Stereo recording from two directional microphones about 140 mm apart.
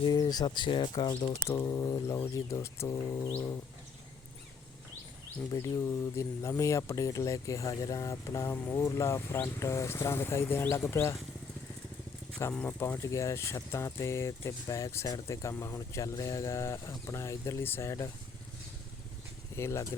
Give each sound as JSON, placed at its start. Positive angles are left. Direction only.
{"t": 0.0, "sound": "speech", "side_deg": 30}
{"t": 1.5, "sound": "speech", "side_deg": 20}
{"t": 5.5, "sound": "speech", "side_deg": 25}
{"t": 12.4, "sound": "speech", "side_deg": 20}
{"t": 19.5, "sound": "speech", "side_deg": 20}